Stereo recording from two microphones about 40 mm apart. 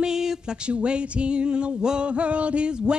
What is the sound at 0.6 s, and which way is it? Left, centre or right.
Speech, right.